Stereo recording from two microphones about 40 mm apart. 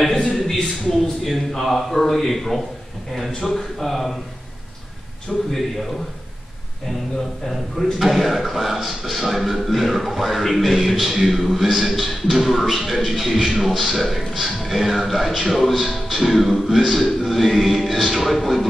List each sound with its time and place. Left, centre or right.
0.1 s a sound: centre
1.2 s speech: centre
5.3 s a man's voice: centre
8.0 s speech: centre